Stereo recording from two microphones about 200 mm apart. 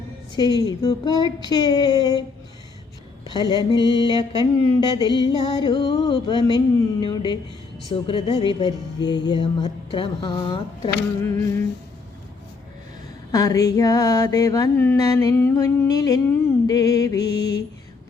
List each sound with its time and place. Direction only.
0.3 s music: 20° left (ahead or behind)
3.2 s music: 20° left (ahead or behind)
11.2 s mantra: 10° left (ahead or behind)
13.3 s mantra: 15° left (ahead or behind)